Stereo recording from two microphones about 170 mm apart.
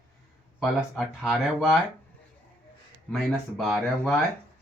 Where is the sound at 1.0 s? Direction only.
Centre (ahead or behind).